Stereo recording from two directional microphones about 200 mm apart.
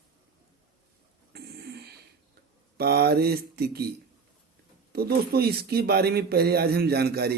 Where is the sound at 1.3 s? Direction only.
55° right (ahead or behind).